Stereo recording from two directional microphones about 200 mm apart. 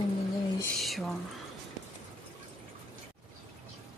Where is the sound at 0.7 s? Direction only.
Centre (ahead or behind).